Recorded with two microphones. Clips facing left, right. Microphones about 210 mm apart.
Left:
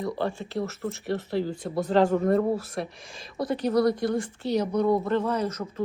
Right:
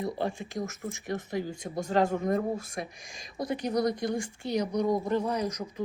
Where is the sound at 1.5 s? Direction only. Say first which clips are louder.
Left 5 dB; 45° right (ahead or behind).